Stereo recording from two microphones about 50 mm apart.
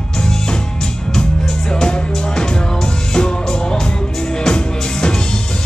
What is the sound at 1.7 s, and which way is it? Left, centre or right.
Music, centre.